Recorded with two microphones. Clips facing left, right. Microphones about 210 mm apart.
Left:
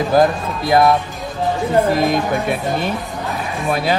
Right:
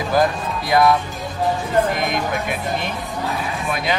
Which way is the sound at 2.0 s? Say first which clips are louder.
Left 5 dB; 30° left (ahead or behind).